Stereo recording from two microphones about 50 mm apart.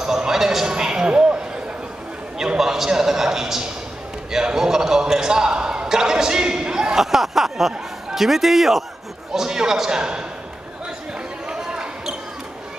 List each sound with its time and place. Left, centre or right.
0.0 s basketball bounce: centre
2.3 s a sound: centre
11.4 s basketball bounce: centre